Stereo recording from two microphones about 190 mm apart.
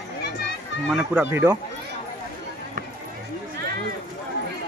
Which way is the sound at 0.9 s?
5° right (ahead or behind).